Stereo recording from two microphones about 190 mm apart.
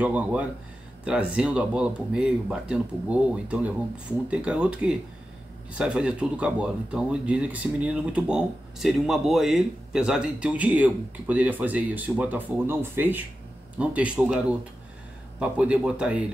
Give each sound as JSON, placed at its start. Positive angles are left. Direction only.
{"t": 0.0, "sound": "speech", "side_deg": -10}